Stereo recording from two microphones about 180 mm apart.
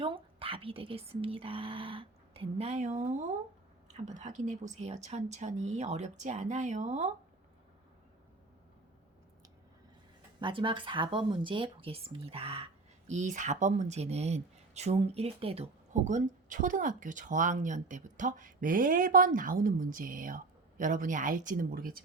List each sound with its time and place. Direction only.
0.0 s speech: 30° right (ahead or behind)
10.4 s speech: 25° right (ahead or behind)
13.1 s speech: 40° right (ahead or behind)